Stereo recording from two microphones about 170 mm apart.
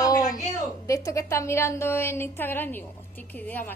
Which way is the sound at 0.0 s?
20° left (ahead or behind).